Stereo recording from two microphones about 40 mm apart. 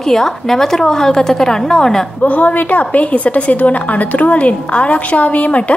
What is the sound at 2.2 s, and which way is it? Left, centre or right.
A woman's voice, left.